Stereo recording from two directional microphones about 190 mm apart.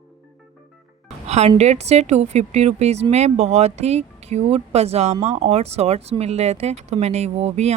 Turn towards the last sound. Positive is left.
turn(degrees=-35)  # may be behind; listen again after turning